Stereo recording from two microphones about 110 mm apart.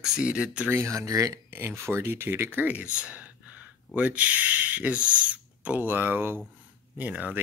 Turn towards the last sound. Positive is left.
turn(degrees=-15)  # may be behind; listen again after turning